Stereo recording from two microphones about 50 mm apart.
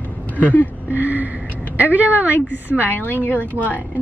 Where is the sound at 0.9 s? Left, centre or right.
Right.